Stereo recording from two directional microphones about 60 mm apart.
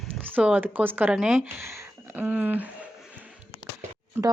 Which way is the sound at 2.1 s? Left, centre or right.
Right.